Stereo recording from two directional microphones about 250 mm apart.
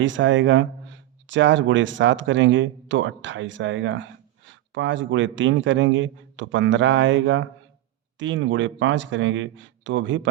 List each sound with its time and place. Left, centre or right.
0.0 s speech: right